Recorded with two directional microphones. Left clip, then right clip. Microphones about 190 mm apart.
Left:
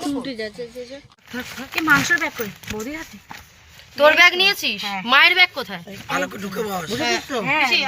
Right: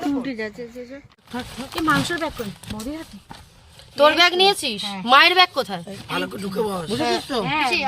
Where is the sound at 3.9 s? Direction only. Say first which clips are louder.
Left 2 dB; 55° right (ahead or behind).